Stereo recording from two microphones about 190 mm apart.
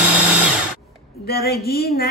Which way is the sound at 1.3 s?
55° left (ahead or behind).